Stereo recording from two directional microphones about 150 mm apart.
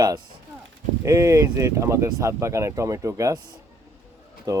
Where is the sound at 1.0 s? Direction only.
20° right (ahead or behind).